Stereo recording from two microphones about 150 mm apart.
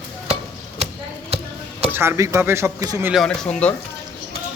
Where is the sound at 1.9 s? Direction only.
15° right (ahead or behind).